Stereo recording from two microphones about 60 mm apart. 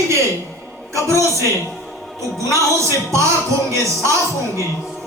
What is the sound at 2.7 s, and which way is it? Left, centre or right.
Speech, right.